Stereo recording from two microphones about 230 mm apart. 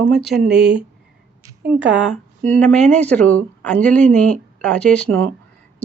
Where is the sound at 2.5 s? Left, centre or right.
Centre.